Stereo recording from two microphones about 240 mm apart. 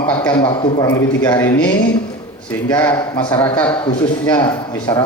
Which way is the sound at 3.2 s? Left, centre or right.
Centre.